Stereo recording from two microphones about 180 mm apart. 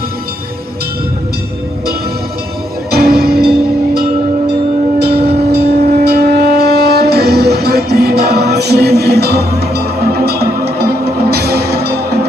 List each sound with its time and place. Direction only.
2.9 s music: 60° right (ahead or behind)
4.9 s train: 60° right (ahead or behind)
6.1 s shofar: 60° right (ahead or behind)